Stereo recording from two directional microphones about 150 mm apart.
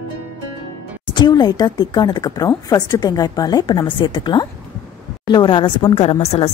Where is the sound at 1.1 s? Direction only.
30° left (ahead or behind).